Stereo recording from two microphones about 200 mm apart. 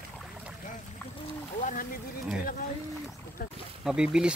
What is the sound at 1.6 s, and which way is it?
Speech, 45° left (ahead or behind).